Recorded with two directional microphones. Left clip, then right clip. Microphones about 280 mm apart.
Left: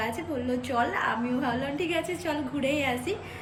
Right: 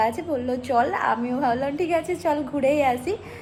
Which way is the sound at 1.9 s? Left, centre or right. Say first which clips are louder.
Right 7 dB; right.